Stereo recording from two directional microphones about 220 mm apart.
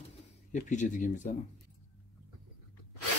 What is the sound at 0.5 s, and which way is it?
Speech, 35° left (ahead or behind).